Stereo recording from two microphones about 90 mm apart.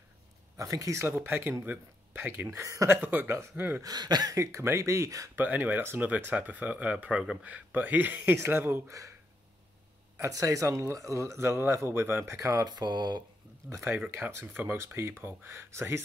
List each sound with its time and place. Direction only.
0.6 s speech: 35° right (ahead or behind)
2.6 s speech: 35° right (ahead or behind)
2.9 s speech: 20° right (ahead or behind)
3.8 s speech: 50° right (ahead or behind); by 5.3 s 35° right (ahead or behind)
5.3 s speech: 20° right (ahead or behind)
10.1 s speech: 35° right (ahead or behind)
12.6 s speech: 55° right (ahead or behind)
13.7 s speech: 30° right (ahead or behind)
13.9 s speech: 20° right (ahead or behind)